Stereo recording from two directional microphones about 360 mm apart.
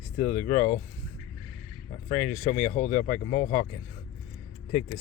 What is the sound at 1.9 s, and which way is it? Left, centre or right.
Speech, left.